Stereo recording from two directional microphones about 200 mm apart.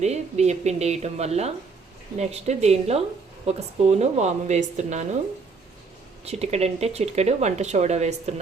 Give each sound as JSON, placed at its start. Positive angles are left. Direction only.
{"t": 0.0, "sound": "speech", "side_deg": -35}
{"t": 6.2, "sound": "speech", "side_deg": -30}